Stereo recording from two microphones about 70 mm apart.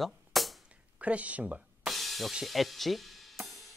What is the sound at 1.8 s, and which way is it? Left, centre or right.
Music, centre.